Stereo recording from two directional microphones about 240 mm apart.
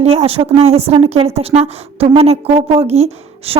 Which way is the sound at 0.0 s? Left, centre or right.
Right.